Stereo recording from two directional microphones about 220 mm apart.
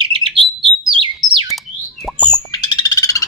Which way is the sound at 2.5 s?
20° left (ahead or behind).